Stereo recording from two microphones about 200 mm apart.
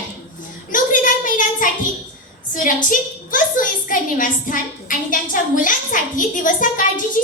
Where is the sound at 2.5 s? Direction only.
40° left (ahead or behind).